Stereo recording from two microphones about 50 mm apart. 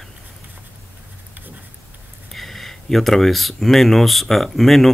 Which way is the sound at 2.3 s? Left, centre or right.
Centre.